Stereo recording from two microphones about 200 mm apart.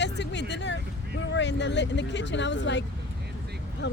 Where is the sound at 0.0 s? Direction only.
60° left (ahead or behind).